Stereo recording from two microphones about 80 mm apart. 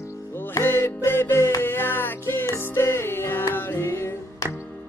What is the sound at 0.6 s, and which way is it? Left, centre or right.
Music, left.